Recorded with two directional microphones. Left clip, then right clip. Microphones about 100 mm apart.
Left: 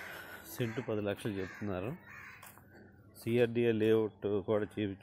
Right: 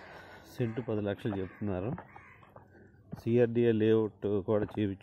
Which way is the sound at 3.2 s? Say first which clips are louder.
Right 3 dB; 90° right.